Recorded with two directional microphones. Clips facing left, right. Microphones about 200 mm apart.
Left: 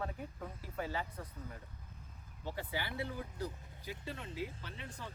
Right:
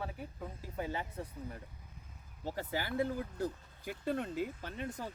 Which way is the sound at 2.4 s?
40° right (ahead or behind).